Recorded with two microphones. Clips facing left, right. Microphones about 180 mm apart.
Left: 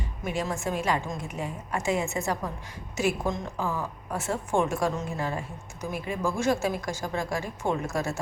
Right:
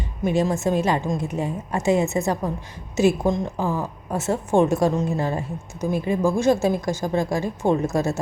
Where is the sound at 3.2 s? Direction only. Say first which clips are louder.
Right 7 dB; 35° right (ahead or behind).